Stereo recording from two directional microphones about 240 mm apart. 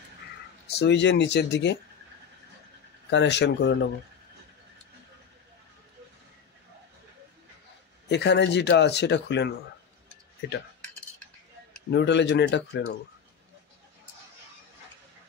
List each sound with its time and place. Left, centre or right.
0.7 s speech: left
3.1 s speech: left
8.1 s speech: left
11.9 s speech: left